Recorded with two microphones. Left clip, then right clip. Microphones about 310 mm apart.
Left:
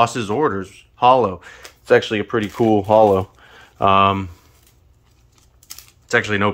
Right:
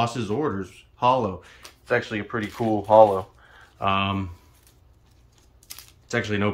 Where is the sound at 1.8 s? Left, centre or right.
Left.